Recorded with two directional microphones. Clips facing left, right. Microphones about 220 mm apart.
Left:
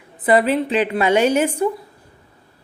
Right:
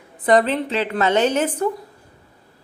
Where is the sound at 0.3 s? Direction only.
10° left (ahead or behind).